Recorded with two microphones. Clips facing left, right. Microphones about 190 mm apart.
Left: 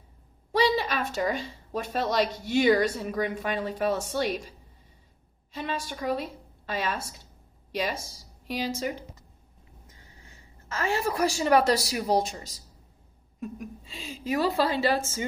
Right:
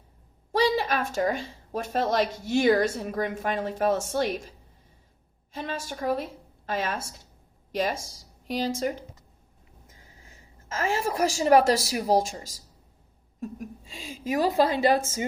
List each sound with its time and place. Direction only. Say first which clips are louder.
0.5 s a woman's voice: right 1 dB; 45° right (ahead or behind)
11.0 s a woman's voice: right 1 dB; 40° right (ahead or behind)